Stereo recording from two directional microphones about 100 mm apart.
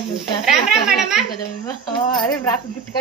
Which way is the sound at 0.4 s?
5° right (ahead or behind).